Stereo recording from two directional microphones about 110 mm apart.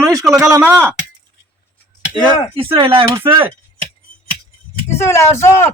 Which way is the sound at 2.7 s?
55° right (ahead or behind).